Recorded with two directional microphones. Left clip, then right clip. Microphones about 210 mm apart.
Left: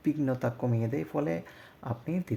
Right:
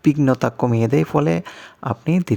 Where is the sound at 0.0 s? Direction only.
35° right (ahead or behind).